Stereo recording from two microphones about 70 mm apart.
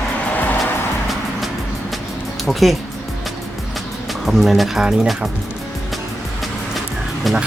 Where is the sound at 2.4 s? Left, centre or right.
Centre.